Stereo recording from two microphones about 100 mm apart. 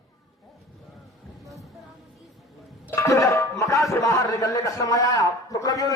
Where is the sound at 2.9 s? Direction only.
30° left (ahead or behind).